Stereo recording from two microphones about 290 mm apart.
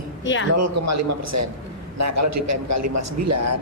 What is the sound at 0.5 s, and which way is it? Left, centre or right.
A man's voice, right.